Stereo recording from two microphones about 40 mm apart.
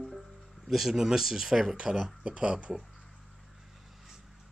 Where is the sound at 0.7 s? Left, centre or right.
Centre; by 2.7 s right.